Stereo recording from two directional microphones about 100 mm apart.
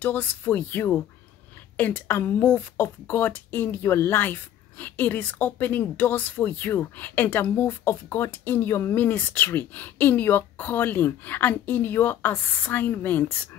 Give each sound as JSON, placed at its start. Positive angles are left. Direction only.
{"t": 0.0, "sound": "speech", "side_deg": 20}